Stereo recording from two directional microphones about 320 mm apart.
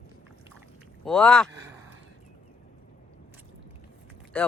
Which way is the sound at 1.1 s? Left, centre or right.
Centre.